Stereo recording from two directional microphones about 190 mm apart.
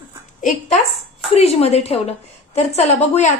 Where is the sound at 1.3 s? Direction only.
35° left (ahead or behind).